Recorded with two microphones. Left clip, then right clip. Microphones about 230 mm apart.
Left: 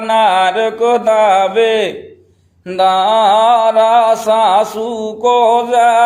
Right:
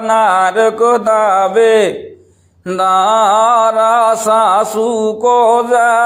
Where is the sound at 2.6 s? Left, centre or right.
Right.